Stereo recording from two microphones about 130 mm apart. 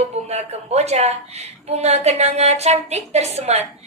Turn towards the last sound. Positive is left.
turn(degrees=-55)  # may be behind; listen again after turning